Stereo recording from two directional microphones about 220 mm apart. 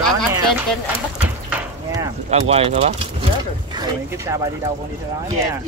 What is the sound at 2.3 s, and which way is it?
Speech, 30° right (ahead or behind).